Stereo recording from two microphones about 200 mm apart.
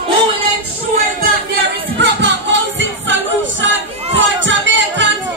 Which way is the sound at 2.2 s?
65° right (ahead or behind).